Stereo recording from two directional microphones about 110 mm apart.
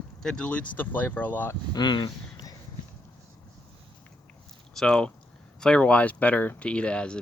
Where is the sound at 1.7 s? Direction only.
40° left (ahead or behind).